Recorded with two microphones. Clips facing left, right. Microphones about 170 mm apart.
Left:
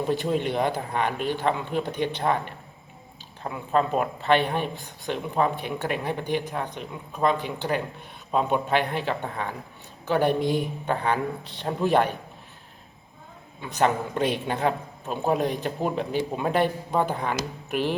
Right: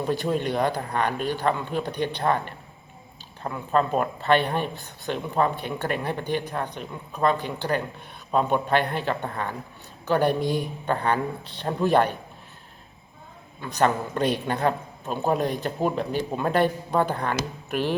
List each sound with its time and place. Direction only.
0.1 s speech: 15° left (ahead or behind)
3.5 s speech: 5° left (ahead or behind)
10.4 s speech: 15° right (ahead or behind)
10.8 s speech: 10° left (ahead or behind)
13.7 s speech: 15° left (ahead or behind)